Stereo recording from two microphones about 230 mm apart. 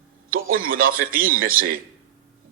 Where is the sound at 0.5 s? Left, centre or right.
Right.